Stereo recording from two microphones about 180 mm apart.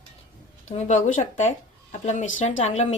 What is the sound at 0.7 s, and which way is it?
Speech, 40° left (ahead or behind).